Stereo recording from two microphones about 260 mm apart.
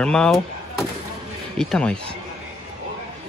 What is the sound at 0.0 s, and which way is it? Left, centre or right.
Speech, centre.